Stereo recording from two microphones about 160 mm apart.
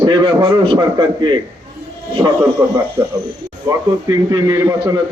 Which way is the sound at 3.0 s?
25° right (ahead or behind).